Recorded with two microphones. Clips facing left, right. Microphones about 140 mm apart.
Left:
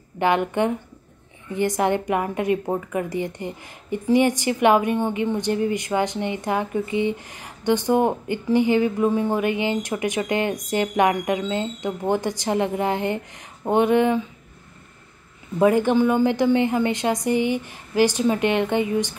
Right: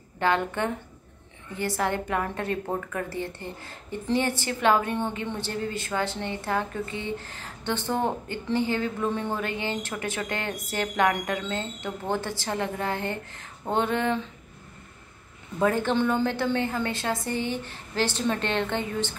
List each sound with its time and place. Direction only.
0.2 s a woman's voice: 15° left (ahead or behind)
15.6 s a woman's voice: 15° left (ahead or behind)